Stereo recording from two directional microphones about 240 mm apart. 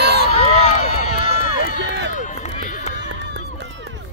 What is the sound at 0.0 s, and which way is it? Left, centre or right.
Run, right.